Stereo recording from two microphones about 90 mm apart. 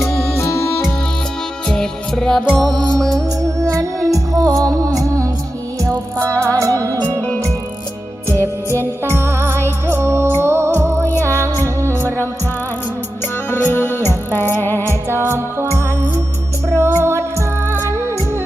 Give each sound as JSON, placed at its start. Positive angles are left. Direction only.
{"t": 0.0, "sound": "music", "side_deg": 5}
{"t": 1.6, "sound": "music", "side_deg": 5}
{"t": 2.6, "sound": "music", "side_deg": -55}
{"t": 2.9, "sound": "music", "side_deg": 5}
{"t": 3.6, "sound": "music", "side_deg": -35}
{"t": 6.4, "sound": "music", "side_deg": -35}
{"t": 7.2, "sound": "music", "side_deg": 15}
{"t": 8.4, "sound": "music", "side_deg": -30}
{"t": 12.0, "sound": "music", "side_deg": 25}
{"t": 13.5, "sound": "music", "side_deg": 20}
{"t": 14.8, "sound": "music", "side_deg": -30}